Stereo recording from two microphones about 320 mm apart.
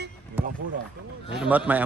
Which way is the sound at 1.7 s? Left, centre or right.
Centre.